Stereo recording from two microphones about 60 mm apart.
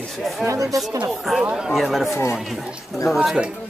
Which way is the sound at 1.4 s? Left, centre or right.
Centre.